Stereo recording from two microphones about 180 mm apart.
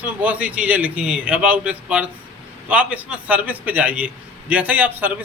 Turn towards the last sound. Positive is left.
turn(degrees=-10)  # may be behind; listen again after turning